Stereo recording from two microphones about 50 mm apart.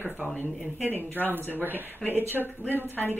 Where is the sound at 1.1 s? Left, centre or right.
Right.